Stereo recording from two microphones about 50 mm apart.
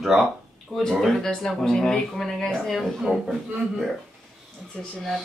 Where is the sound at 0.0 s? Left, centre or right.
Centre.